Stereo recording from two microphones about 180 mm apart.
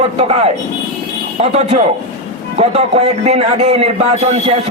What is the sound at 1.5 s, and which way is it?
Speech, 40° right (ahead or behind).